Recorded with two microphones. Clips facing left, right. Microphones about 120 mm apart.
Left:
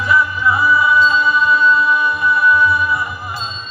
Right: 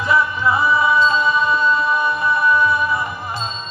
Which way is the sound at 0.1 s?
25° right (ahead or behind).